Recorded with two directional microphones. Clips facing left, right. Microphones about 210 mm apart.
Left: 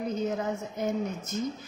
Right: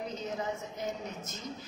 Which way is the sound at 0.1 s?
50° left (ahead or behind).